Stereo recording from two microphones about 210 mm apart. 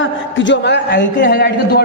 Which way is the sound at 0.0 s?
60° left (ahead or behind).